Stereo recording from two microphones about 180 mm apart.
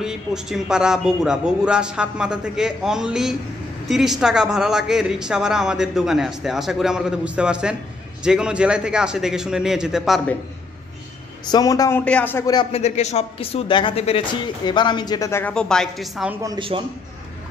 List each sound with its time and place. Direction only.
0.0 s speech: 5° right (ahead or behind)
11.5 s speech: 20° left (ahead or behind)
12.0 s speech: 5° left (ahead or behind)
12.7 s speech: 35° left (ahead or behind); by 16.3 s centre (ahead or behind)
16.4 s speech: 30° right (ahead or behind)